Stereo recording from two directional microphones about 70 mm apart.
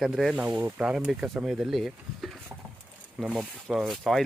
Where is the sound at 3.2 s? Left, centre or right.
Centre.